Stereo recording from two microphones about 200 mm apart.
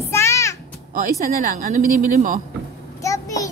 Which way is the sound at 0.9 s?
40° right (ahead or behind).